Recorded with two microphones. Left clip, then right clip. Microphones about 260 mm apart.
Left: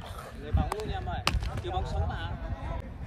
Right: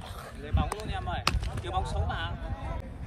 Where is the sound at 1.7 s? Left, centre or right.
Centre.